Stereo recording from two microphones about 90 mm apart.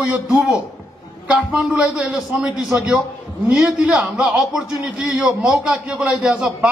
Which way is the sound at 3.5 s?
5° right (ahead or behind).